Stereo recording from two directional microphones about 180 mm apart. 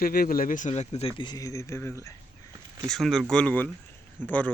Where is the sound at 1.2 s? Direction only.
20° left (ahead or behind).